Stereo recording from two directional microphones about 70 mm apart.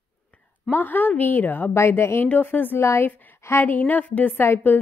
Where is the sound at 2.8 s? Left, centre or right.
Left.